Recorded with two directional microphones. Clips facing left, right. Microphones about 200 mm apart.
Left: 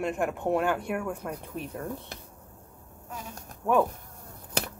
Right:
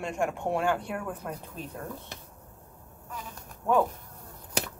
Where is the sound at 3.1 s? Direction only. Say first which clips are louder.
Left 1 dB; 45° left (ahead or behind).